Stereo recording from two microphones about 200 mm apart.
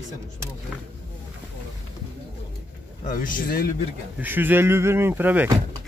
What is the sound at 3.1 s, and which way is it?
Speech, 45° left (ahead or behind).